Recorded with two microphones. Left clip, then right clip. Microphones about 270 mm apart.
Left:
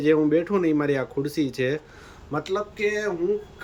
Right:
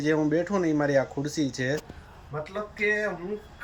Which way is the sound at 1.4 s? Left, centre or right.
Centre.